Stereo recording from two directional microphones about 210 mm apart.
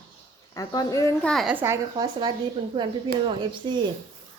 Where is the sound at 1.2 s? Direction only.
Centre (ahead or behind).